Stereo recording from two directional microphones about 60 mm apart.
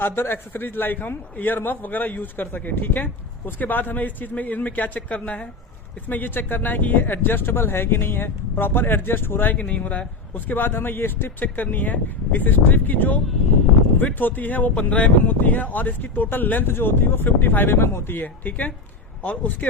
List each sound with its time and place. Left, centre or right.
0.0 s a man's voice: left
9.6 s a man's voice: left